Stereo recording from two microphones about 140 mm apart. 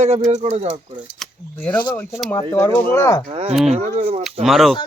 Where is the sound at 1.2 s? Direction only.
10° left (ahead or behind).